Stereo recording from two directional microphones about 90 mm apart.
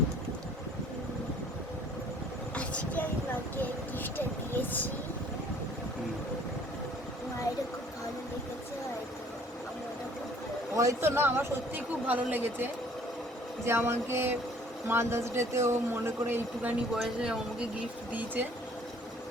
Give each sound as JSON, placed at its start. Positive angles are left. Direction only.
{"t": 2.6, "sound": "vehicle", "side_deg": 15}
{"t": 3.6, "sound": "a sound", "side_deg": 20}
{"t": 10.8, "sound": "speech", "side_deg": -30}
{"t": 13.7, "sound": "speech", "side_deg": -25}
{"t": 16.9, "sound": "speech", "side_deg": -10}